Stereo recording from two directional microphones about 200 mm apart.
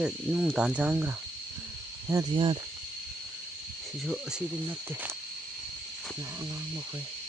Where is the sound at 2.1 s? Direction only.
20° right (ahead or behind).